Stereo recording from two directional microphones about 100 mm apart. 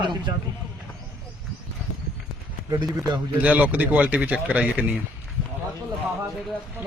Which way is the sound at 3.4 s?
15° right (ahead or behind).